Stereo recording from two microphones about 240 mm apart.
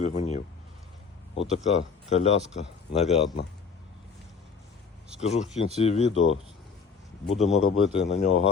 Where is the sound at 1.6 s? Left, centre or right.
Left.